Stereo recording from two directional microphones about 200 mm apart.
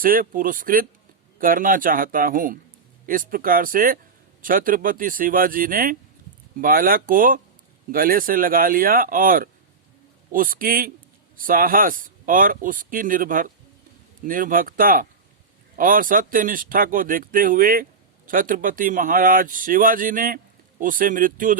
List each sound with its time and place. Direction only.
0.0 s speech: 45° right (ahead or behind)